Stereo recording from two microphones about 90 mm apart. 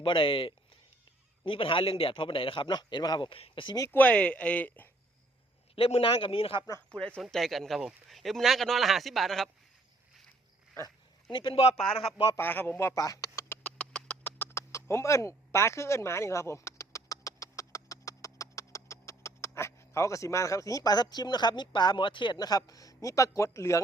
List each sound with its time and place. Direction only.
0.0 s a man's voice: 70° left (ahead or behind); by 3.2 s 55° left (ahead or behind)
3.2 s speech: 85° left
3.9 s speech: 15° left (ahead or behind)
5.7 s a man's voice: 90° left
7.2 s speech: centre (ahead or behind)
11.3 s a man's voice: 70° left (ahead or behind)
12.4 s speech: 25° left (ahead or behind)
12.9 s speech: 40° left (ahead or behind)
13.5 s a sound: 15° left (ahead or behind); by 23.8 s 35° left (ahead or behind)